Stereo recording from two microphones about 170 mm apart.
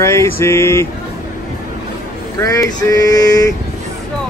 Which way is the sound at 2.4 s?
20° left (ahead or behind).